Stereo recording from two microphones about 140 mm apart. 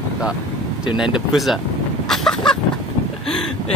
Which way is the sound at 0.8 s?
5° right (ahead or behind).